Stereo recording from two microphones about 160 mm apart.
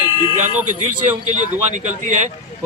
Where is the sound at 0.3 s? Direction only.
50° right (ahead or behind).